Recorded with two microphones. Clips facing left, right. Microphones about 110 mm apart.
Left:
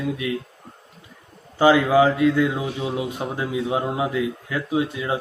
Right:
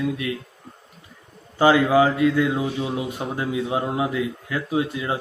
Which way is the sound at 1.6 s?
15° left (ahead or behind).